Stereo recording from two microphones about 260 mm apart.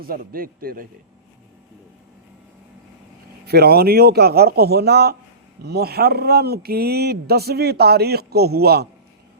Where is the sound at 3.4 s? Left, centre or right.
Right.